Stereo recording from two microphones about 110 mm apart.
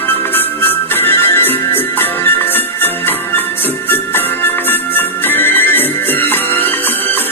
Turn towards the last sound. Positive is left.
turn(degrees=20)  # may be behind; listen again after turning